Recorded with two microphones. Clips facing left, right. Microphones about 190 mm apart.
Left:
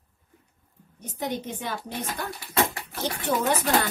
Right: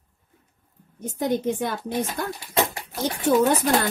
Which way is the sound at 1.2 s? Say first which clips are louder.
Right 7 dB; 50° right (ahead or behind).